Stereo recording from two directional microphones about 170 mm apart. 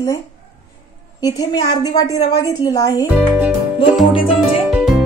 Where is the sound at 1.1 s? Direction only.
20° left (ahead or behind).